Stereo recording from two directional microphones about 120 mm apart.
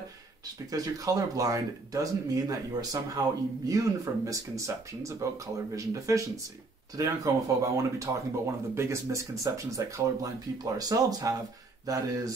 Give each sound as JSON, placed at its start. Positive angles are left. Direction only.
{"t": 0.7, "sound": "speech", "side_deg": -30}